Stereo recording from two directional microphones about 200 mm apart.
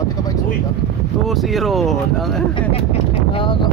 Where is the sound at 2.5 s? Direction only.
30° left (ahead or behind).